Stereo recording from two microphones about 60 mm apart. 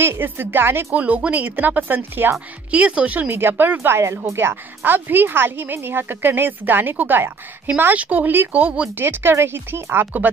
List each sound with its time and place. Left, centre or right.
0.0 s a woman's voice: right
0.9 s speech: right
2.7 s speech: centre
3.3 s a woman's voice: right
8.9 s a woman's voice: right